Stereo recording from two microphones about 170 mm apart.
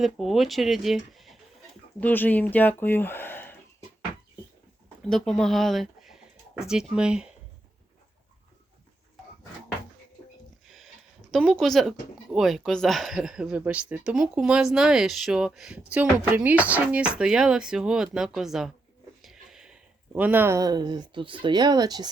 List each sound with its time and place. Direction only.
0.0 s speech: centre (ahead or behind)
2.0 s speech: 10° left (ahead or behind)
5.0 s speech: 5° left (ahead or behind)
11.3 s speech: centre (ahead or behind)
19.2 s a sound: centre (ahead or behind)
20.1 s speech: 10° right (ahead or behind)